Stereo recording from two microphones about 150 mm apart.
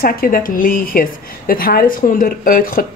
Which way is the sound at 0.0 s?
70° left (ahead or behind).